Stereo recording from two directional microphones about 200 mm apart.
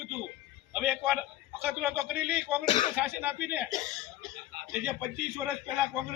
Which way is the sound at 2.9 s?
10° right (ahead or behind).